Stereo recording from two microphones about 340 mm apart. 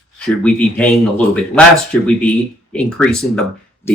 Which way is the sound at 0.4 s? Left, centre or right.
Centre.